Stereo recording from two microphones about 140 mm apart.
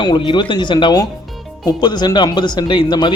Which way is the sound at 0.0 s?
35° left (ahead or behind).